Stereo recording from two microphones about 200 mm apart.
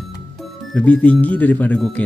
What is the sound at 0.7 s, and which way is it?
Speech, 5° left (ahead or behind).